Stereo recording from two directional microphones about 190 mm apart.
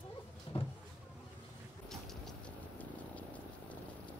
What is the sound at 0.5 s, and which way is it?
Vehicle, 30° left (ahead or behind).